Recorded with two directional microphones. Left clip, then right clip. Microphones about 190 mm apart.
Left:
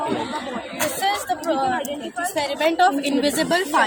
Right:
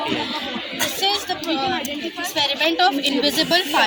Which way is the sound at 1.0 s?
20° left (ahead or behind).